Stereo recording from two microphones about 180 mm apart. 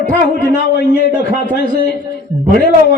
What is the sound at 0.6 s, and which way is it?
Speech, 75° left (ahead or behind).